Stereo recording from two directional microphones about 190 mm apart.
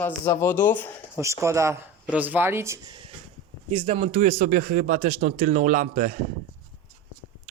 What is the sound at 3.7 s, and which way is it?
Speech, 30° right (ahead or behind).